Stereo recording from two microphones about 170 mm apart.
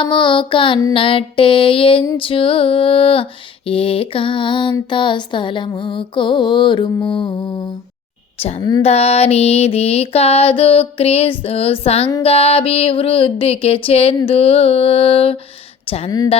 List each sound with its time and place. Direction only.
0.0 s music: 30° left (ahead or behind)
8.4 s a woman's voice: 40° left (ahead or behind)
8.8 s music: 35° left (ahead or behind)